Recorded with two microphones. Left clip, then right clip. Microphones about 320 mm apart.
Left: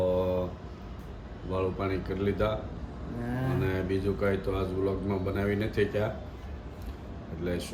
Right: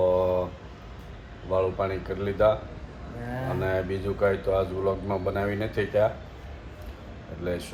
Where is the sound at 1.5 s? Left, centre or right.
Centre.